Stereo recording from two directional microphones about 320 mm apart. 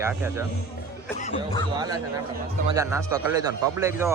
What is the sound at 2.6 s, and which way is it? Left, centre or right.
A man's voice, centre.